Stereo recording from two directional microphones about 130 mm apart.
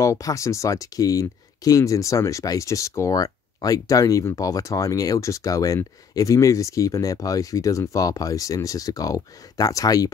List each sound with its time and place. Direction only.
0.0 s speech: 25° left (ahead or behind)